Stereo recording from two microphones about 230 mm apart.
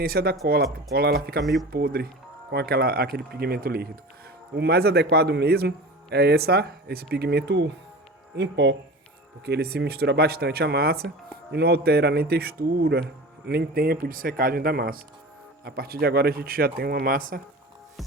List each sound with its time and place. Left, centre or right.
0.0 s a man's voice: right